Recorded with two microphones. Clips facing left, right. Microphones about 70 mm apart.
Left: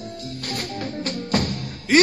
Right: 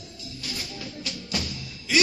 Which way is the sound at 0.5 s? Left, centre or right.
Left.